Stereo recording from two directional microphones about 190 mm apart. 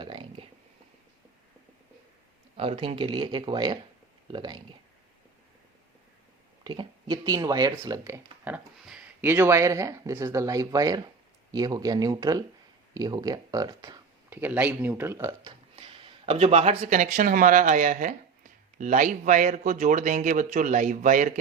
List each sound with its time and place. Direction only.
0.0 s a sound: 25° right (ahead or behind)
2.6 s speech: 30° right (ahead or behind)
6.7 s speech: 20° right (ahead or behind)
14.3 s speech: 10° right (ahead or behind); by 21.3 s 40° right (ahead or behind)